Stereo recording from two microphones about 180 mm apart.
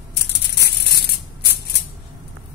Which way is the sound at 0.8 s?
65° left (ahead or behind).